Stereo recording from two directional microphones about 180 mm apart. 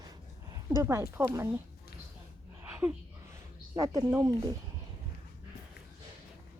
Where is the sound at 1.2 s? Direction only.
10° right (ahead or behind).